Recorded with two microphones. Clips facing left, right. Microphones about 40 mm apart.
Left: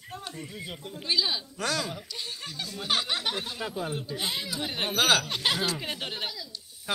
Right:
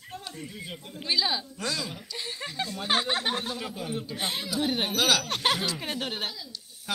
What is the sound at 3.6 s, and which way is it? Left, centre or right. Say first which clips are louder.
Speech: left 2 dB; left.